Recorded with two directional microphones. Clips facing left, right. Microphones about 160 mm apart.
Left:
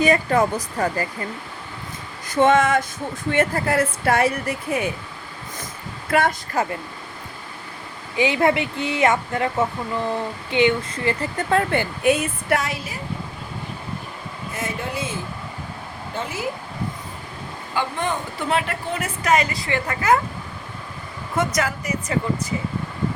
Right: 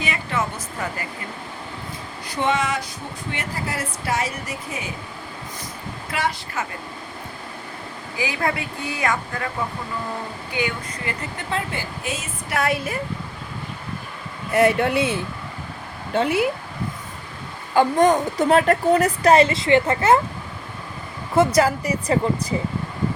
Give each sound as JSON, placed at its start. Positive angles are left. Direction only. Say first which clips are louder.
{"t": 0.0, "sound": "speech", "louder": "left 8 dB", "side_deg": 40}
{"t": 2.2, "sound": "speech", "louder": "left 6 dB", "side_deg": 45}
{"t": 6.1, "sound": "a woman's voice", "louder": "left 6 dB", "side_deg": 50}
{"t": 6.6, "sound": "speech", "louder": "left 8 dB", "side_deg": 35}
{"t": 8.1, "sound": "speech", "louder": "left 6 dB", "side_deg": 25}
{"t": 11.3, "sound": "speech", "louder": "left 8 dB", "side_deg": 55}
{"t": 12.5, "sound": "speech", "louder": "right 4 dB", "side_deg": -55}
{"t": 14.5, "sound": "speech", "louder": "right 11 dB", "side_deg": -65}
{"t": 17.7, "sound": "a woman's voice", "louder": "right 9 dB", "side_deg": -40}
{"t": 21.3, "sound": "a woman's voice", "louder": "right 6 dB", "side_deg": -30}